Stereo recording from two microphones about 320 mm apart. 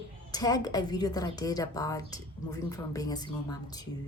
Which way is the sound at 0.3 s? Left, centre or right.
Centre.